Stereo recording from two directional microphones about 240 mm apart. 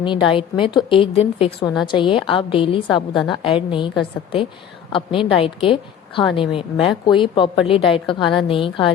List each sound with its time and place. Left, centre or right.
0.0 s a woman's voice: left
6.4 s a woman's voice: centre
6.7 s a woman's voice: left